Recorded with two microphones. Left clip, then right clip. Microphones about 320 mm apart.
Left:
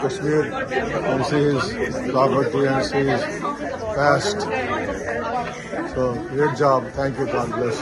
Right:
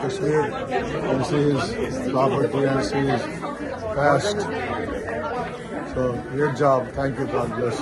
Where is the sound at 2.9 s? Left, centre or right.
Left.